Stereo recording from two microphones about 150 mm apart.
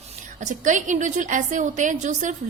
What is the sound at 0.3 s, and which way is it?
A woman's voice, 55° right (ahead or behind).